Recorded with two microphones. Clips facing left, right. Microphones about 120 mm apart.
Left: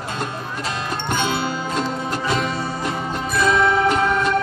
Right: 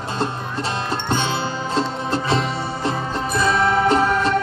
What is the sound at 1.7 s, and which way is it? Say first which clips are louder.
Music: right 5 dB; 30° right (ahead or behind).